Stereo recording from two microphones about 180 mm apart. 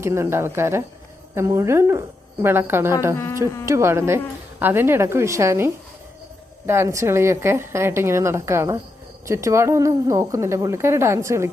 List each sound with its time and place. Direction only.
0.0 s a woman's voice: 15° right (ahead or behind)
3.4 s speech: 15° left (ahead or behind)
3.7 s a woman's voice: 15° right (ahead or behind)